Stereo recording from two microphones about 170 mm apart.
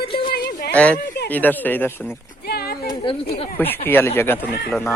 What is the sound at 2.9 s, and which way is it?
Speech, 30° left (ahead or behind).